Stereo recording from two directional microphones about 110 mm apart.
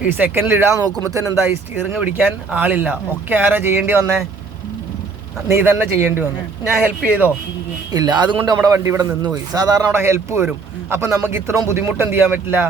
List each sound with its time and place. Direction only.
0.0 s speech: 20° right (ahead or behind)
2.0 s speech: 10° right (ahead or behind)
5.5 s speech: 25° right (ahead or behind)
7.9 s speech: 40° right (ahead or behind)
9.9 s speech: 25° right (ahead or behind)